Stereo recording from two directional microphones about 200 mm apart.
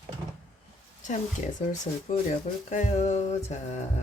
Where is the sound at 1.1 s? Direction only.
40° left (ahead or behind).